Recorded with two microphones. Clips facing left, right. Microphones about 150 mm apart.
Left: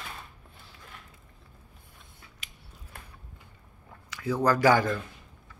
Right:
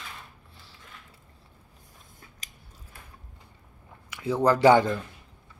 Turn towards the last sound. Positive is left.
turn(degrees=-25)  # may be behind; listen again after turning